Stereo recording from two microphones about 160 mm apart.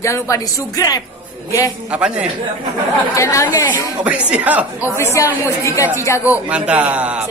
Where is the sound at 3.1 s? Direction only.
20° left (ahead or behind).